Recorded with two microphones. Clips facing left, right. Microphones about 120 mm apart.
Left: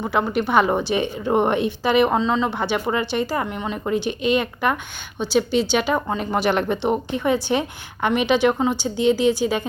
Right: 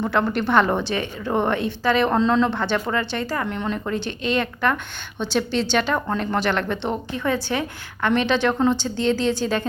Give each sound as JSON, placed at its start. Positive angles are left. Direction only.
{"t": 0.0, "sound": "speech", "side_deg": 10}
{"t": 2.1, "sound": "speech", "side_deg": 5}